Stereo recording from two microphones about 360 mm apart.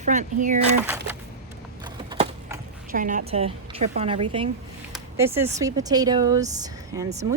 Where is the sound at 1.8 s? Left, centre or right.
Centre.